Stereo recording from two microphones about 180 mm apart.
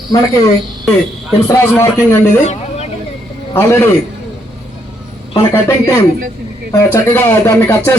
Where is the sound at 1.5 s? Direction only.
15° left (ahead or behind).